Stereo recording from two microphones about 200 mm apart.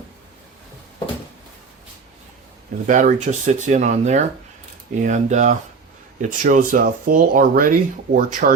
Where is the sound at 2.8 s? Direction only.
40° right (ahead or behind).